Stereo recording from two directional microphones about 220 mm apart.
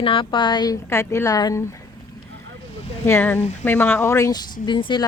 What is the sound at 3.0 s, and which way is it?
Speech, 10° left (ahead or behind).